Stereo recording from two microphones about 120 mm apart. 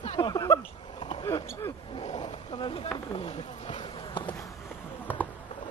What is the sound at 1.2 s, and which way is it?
Basketball bounce, 25° left (ahead or behind).